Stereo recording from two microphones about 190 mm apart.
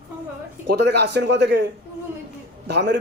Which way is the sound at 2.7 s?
65° right (ahead or behind).